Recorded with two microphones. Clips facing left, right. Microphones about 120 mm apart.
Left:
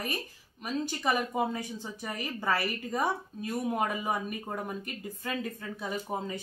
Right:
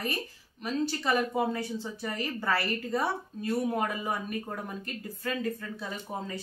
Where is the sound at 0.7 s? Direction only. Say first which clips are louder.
Right 1 dB; 15° left (ahead or behind).